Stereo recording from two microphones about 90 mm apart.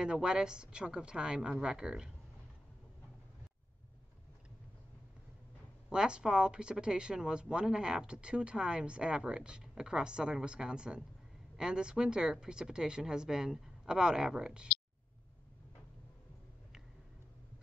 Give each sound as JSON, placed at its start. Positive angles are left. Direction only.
{"t": 0.0, "sound": "speech", "side_deg": -10}
{"t": 5.9, "sound": "speech", "side_deg": -10}